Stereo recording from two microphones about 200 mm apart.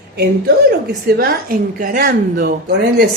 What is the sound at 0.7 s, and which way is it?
A woman's voice, 50° right (ahead or behind).